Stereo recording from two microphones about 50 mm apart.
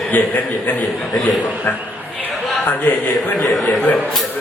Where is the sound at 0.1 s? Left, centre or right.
Left.